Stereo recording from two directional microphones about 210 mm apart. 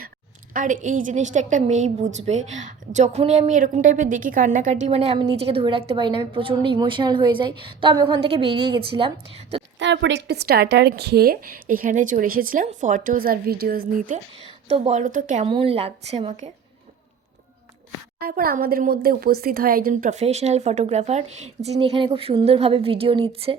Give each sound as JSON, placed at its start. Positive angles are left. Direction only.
{"t": 0.5, "sound": "a woman's voice", "side_deg": -40}
{"t": 9.7, "sound": "speech", "side_deg": -60}
{"t": 15.4, "sound": "a woman's voice", "side_deg": -25}
{"t": 18.2, "sound": "speech", "side_deg": -45}